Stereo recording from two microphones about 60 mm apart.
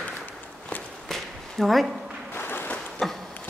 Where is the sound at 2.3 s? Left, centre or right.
Left.